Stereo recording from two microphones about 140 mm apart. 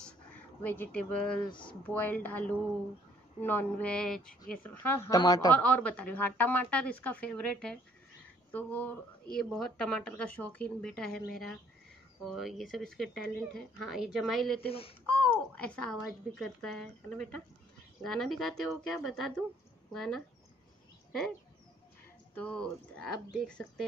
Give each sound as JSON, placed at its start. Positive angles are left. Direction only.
{"t": 0.6, "sound": "a woman's voice", "side_deg": 15}
{"t": 5.5, "sound": "speech", "side_deg": 10}
{"t": 14.7, "sound": "speech", "side_deg": 40}
{"t": 15.2, "sound": "speech", "side_deg": 10}
{"t": 22.3, "sound": "speech", "side_deg": 10}